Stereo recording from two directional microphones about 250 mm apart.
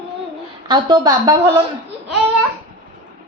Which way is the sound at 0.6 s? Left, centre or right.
Centre.